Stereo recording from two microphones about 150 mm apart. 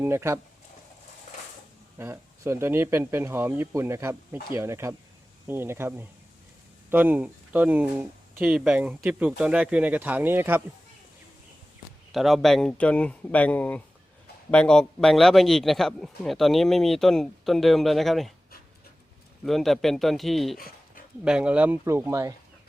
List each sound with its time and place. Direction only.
0.0 s speech: 15° right (ahead or behind)
2.0 s speech: 15° right (ahead or behind)
12.1 s a man's voice: centre (ahead or behind)
19.5 s a man's voice: centre (ahead or behind)
20.6 s dog: 75° left (ahead or behind)
21.2 s speech: 5° right (ahead or behind)